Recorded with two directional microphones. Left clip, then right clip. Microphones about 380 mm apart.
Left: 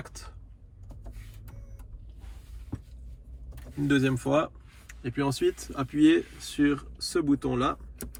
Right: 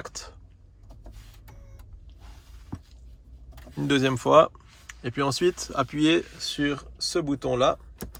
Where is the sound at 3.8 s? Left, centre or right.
Centre.